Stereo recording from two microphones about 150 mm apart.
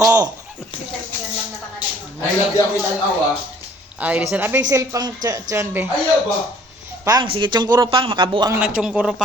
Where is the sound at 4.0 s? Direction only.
10° right (ahead or behind).